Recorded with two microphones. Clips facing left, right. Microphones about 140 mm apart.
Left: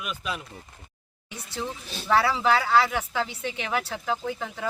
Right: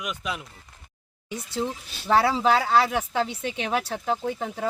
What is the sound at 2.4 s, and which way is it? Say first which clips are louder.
Speech: right 1 dB; 25° right (ahead or behind).